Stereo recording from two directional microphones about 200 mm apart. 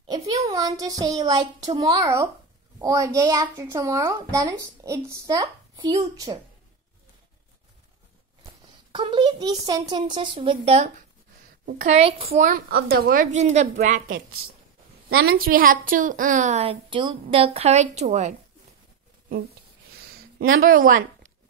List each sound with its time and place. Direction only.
0.1 s a child's voice: 20° right (ahead or behind)
8.9 s a child's voice: 25° right (ahead or behind)
12.3 s a woman's voice: 45° right (ahead or behind)
20.5 s a woman's voice: 45° right (ahead or behind)